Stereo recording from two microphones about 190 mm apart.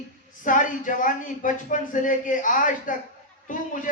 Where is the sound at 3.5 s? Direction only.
45° left (ahead or behind).